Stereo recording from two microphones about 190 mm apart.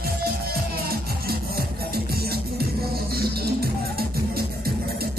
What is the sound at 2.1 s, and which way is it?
Music, 55° right (ahead or behind).